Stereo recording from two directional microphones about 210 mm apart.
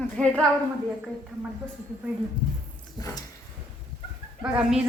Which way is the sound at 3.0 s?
20° left (ahead or behind).